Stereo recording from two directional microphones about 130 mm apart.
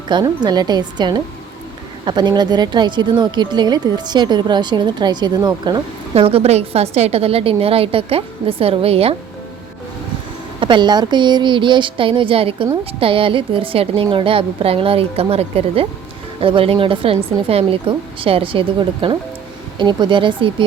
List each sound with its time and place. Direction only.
0.1 s speech: 35° right (ahead or behind)
6.1 s a woman's voice: 50° right (ahead or behind)
10.6 s a woman's voice: 35° right (ahead or behind)